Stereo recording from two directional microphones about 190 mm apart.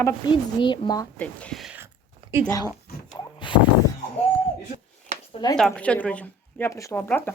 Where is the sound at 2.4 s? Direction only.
20° left (ahead or behind).